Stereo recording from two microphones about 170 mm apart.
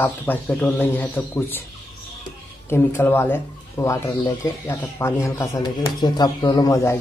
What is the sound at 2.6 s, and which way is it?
Speech, 15° left (ahead or behind).